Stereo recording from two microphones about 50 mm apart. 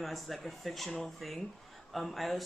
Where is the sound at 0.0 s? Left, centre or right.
Centre.